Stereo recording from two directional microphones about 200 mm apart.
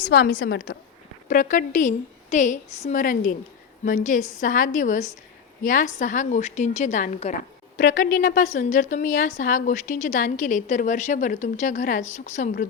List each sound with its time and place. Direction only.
0.1 s a woman's voice: 50° left (ahead or behind)